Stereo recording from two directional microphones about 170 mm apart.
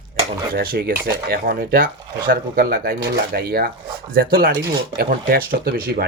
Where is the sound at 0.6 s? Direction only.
70° right (ahead or behind).